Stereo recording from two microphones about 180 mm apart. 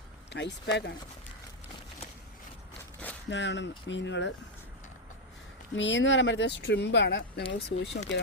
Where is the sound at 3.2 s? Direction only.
75° left (ahead or behind).